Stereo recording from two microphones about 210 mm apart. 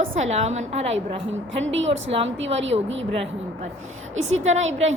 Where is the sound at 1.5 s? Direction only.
65° right (ahead or behind).